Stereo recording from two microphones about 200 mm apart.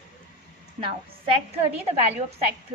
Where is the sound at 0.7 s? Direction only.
25° right (ahead or behind).